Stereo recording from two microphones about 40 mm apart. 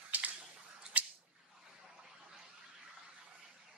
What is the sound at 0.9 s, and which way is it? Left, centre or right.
Squish, right.